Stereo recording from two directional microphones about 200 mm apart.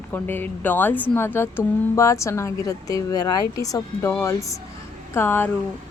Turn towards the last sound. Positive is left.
turn(degrees=10)  # may be behind; listen again after turning